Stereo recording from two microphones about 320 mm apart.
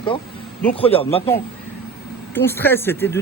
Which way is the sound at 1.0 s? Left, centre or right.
Centre.